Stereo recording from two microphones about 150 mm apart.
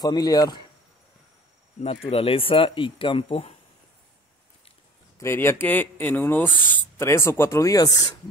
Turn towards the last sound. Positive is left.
turn(degrees=25)  # may be behind; listen again after turning